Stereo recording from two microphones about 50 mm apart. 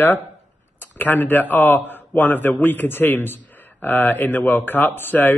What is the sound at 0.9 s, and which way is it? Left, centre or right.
Speech, left.